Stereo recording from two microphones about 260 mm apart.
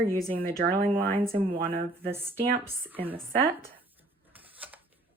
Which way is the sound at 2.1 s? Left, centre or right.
Centre.